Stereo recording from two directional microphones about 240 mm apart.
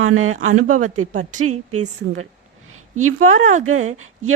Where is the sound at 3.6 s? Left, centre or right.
Right.